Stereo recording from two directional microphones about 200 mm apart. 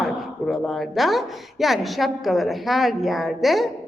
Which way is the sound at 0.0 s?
Centre (ahead or behind).